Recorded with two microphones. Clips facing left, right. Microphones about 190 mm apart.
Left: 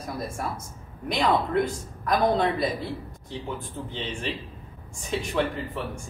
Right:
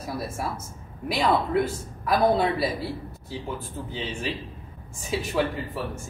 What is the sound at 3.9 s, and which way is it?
A man's voice, 5° right (ahead or behind).